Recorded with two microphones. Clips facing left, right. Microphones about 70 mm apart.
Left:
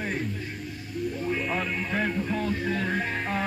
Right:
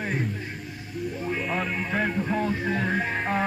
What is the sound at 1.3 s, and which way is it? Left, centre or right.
Music, centre.